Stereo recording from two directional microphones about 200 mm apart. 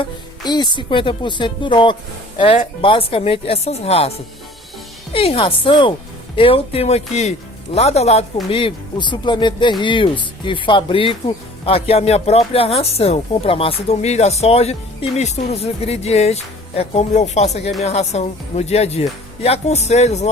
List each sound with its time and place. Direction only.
0.0 s speech: 20° left (ahead or behind)
5.1 s speech: 30° left (ahead or behind)